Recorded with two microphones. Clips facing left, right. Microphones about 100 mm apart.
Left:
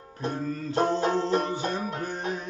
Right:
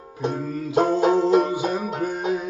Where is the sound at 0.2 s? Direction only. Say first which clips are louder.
Right 4 dB; 10° right (ahead or behind).